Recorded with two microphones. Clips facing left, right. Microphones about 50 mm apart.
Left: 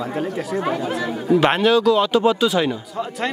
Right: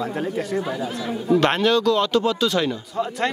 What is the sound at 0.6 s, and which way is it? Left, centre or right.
Speech, left.